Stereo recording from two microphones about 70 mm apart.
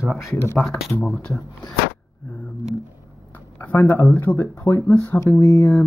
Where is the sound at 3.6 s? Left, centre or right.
Left.